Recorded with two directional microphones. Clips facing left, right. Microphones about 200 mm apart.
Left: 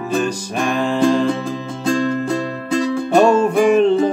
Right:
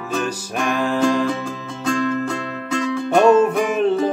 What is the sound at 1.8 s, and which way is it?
Music, 35° left (ahead or behind).